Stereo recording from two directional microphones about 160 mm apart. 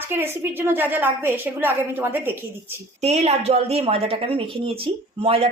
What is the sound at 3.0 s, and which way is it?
A woman's voice, 45° right (ahead or behind).